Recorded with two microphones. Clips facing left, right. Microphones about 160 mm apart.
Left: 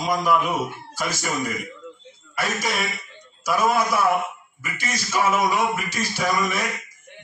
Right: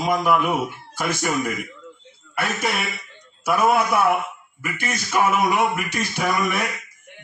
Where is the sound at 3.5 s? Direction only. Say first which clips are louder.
Right 2 dB; 60° right (ahead or behind).